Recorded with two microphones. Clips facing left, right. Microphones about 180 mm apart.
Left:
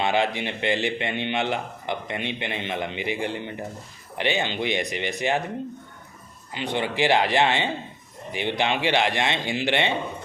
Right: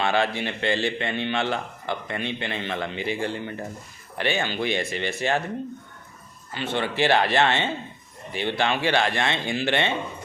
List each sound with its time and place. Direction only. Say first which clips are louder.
0.0 s a man's voice: even; 15° left (ahead or behind)
6.5 s a man's voice: even; 15° left (ahead or behind)